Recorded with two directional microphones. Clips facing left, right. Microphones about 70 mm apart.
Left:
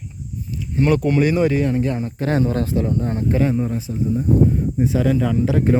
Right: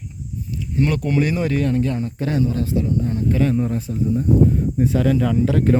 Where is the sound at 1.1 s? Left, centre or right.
Centre; by 2.1 s left.